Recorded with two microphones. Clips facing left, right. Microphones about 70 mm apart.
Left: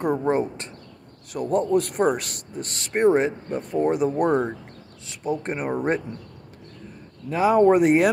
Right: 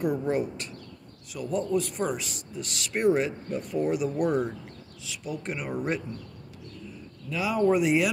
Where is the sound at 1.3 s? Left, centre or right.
Left.